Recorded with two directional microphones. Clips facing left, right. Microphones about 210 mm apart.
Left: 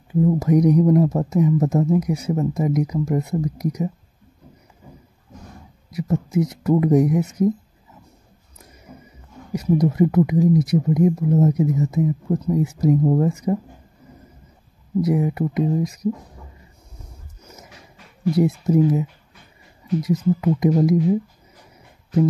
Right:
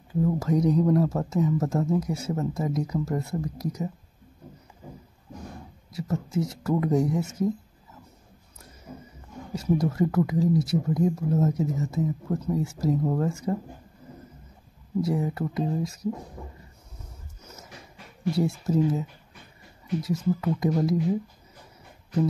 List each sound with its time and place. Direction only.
0.1 s speech: 20° left (ahead or behind)
5.9 s speech: 20° left (ahead or behind)
9.5 s speech: 20° left (ahead or behind)
15.0 s speech: 20° left (ahead or behind)
17.4 s a sound: 10° left (ahead or behind)
18.3 s speech: 20° left (ahead or behind)
20.3 s speech: 20° left (ahead or behind)